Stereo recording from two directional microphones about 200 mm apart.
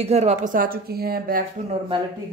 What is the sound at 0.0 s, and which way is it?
Speech, 35° right (ahead or behind).